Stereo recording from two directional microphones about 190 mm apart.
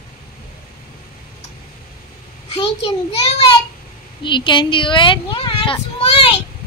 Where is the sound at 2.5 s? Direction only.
30° left (ahead or behind).